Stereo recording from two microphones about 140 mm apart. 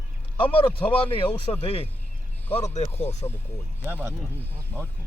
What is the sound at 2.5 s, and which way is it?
Speech, 50° left (ahead or behind).